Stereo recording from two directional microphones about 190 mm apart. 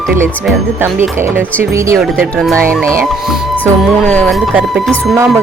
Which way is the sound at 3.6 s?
5° left (ahead or behind).